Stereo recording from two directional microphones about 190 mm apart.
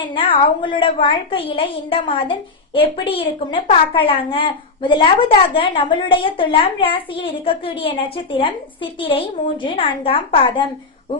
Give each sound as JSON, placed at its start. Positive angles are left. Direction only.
{"t": 0.1, "sound": "a woman's voice", "side_deg": 30}